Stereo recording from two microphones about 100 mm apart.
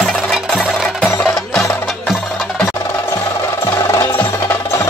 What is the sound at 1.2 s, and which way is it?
Music, 5° left (ahead or behind).